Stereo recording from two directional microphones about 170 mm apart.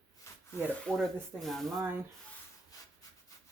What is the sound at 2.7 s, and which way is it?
Rub, 20° left (ahead or behind).